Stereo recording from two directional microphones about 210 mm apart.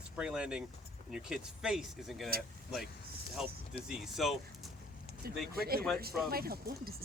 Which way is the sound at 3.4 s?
Centre (ahead or behind).